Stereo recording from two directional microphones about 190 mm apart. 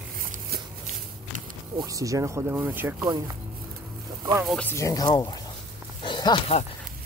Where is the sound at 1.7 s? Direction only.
15° right (ahead or behind).